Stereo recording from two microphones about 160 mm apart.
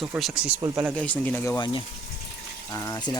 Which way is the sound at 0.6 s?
20° right (ahead or behind).